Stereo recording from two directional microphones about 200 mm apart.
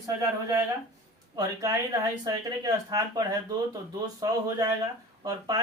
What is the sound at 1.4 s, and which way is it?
Speech, 20° right (ahead or behind).